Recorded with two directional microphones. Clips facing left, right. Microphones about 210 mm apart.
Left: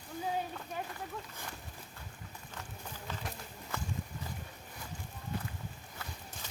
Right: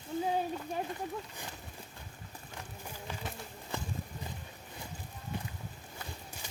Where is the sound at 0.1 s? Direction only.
25° right (ahead or behind).